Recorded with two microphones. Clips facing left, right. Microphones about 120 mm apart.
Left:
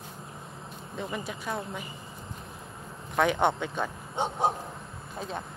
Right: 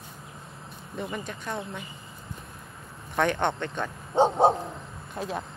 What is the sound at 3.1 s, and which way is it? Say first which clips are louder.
Speech: left 1 dB; 10° left (ahead or behind).